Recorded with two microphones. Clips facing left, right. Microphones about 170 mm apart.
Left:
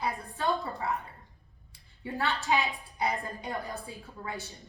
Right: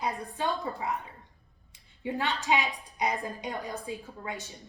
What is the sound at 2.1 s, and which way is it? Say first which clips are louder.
A woman's voice: even; 20° right (ahead or behind).